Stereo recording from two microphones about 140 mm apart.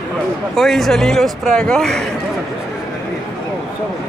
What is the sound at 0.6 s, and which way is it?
Speech, centre (ahead or behind).